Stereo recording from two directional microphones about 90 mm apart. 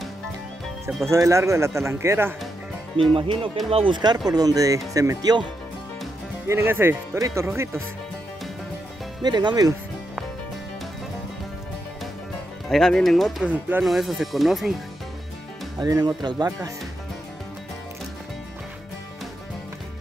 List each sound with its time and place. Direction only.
1.0 s speech: 35° right (ahead or behind)
3.0 s speech: 80° right
4.3 s speech: 45° right (ahead or behind)
6.4 s speech: 30° right (ahead or behind)
7.2 s speech: 35° right (ahead or behind)
9.2 s speech: 55° right (ahead or behind)
12.6 s speech: 5° left (ahead or behind)
13.4 s speech: 20° right (ahead or behind)
13.8 s speech: centre (ahead or behind)
15.8 s speech: 50° right (ahead or behind)